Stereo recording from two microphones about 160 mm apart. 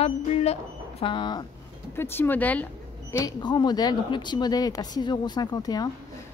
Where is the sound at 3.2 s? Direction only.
25° left (ahead or behind).